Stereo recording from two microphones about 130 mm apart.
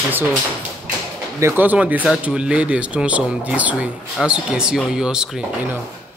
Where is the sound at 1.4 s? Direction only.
15° right (ahead or behind).